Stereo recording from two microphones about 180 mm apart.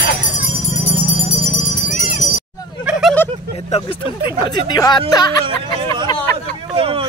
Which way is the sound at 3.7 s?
30° left (ahead or behind).